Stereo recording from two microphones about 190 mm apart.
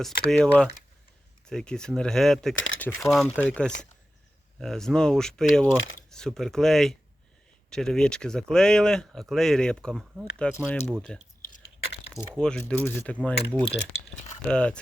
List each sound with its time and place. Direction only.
0.0 s speech: 5° left (ahead or behind)
2.6 s speech: 90° left
3.1 s speech: 5° left (ahead or behind)
12.4 s speech: 5° left (ahead or behind)